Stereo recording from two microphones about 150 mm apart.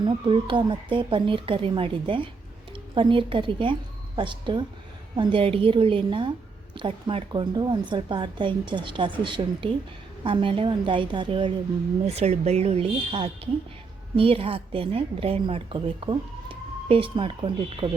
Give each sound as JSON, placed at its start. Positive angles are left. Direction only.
{"t": 0.0, "sound": "a woman's voice", "side_deg": -30}
{"t": 12.0, "sound": "a woman's voice", "side_deg": -45}